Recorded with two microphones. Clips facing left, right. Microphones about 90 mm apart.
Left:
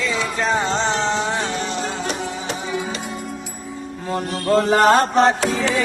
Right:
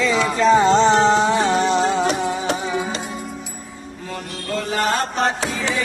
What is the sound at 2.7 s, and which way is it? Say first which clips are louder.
Music: right 1 dB; centre (ahead or behind).